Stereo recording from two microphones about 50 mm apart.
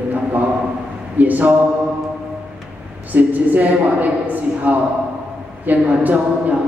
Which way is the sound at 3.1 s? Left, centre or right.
Right.